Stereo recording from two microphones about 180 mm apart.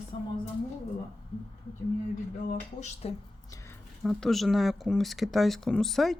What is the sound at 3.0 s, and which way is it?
Speech, 35° left (ahead or behind).